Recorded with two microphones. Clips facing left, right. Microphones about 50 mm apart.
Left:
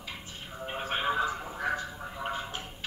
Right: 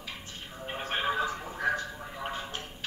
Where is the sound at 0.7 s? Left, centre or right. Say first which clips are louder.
Even; centre.